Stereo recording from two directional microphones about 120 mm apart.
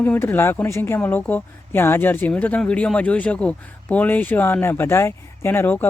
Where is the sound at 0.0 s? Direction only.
20° left (ahead or behind).